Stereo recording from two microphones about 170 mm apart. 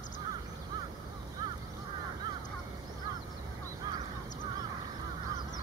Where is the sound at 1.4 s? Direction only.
25° right (ahead or behind).